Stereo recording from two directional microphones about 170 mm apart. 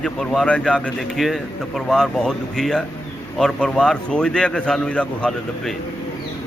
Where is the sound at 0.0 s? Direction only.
5° left (ahead or behind).